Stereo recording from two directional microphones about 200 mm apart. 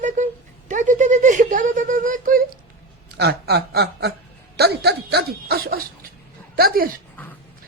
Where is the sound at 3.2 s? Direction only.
55° right (ahead or behind).